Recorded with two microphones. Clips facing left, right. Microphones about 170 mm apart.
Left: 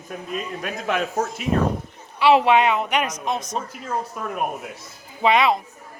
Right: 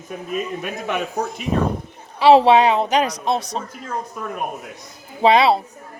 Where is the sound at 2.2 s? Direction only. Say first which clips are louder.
Right 4 dB; 35° right (ahead or behind).